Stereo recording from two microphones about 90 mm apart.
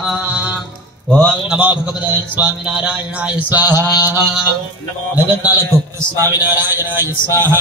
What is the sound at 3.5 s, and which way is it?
Speech, 20° right (ahead or behind).